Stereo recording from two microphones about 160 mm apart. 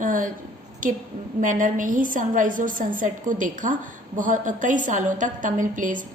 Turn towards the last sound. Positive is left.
turn(degrees=-55)  # may be behind; listen again after turning